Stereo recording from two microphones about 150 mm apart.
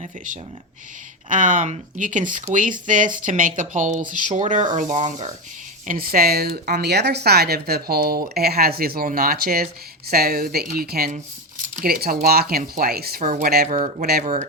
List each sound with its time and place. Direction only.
1.3 s speech: 55° right (ahead or behind)
5.9 s speech: 80° right
13.7 s speech: 60° right (ahead or behind)